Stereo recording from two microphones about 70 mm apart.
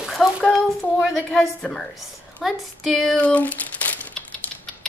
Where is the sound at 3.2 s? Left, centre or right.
Left.